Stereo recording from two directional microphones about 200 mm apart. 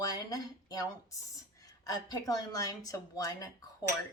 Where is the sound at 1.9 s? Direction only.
20° left (ahead or behind).